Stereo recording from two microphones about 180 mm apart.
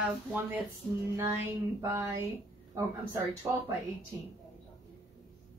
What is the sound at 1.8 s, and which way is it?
Speech, 15° right (ahead or behind).